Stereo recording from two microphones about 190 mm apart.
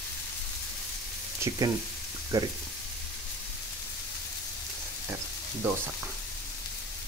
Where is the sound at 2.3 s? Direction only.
15° right (ahead or behind).